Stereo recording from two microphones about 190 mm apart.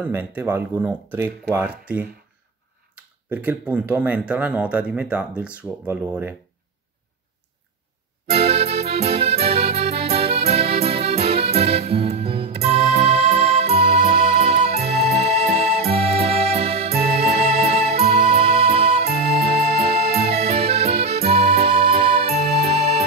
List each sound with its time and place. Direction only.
0.0 s speech: 10° right (ahead or behind)
3.3 s speech: 10° right (ahead or behind)
8.3 s music: 30° right (ahead or behind)